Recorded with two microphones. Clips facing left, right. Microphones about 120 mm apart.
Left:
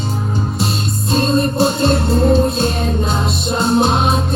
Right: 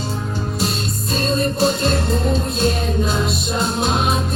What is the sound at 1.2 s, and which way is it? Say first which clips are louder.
Music: left 2 dB; 30° left (ahead or behind).